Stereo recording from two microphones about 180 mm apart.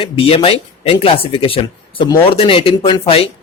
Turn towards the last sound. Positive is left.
turn(degrees=30)  # may be behind; listen again after turning